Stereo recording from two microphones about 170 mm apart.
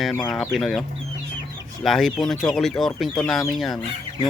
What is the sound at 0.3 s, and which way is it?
Speech, centre (ahead or behind).